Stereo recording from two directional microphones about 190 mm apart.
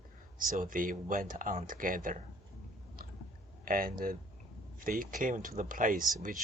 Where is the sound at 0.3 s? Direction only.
45° right (ahead or behind).